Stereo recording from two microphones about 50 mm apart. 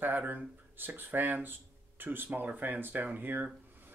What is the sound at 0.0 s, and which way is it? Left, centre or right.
Speech, right.